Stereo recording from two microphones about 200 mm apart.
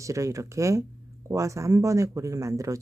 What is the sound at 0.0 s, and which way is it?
Speech, 15° right (ahead or behind).